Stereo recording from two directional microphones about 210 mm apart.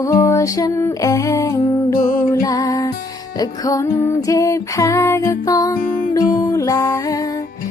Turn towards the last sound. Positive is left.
turn(degrees=15)  # may be behind; listen again after turning